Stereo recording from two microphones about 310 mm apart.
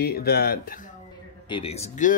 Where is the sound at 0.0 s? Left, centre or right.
Left.